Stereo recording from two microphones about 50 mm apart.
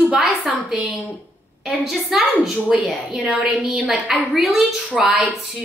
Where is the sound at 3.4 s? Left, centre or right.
Centre.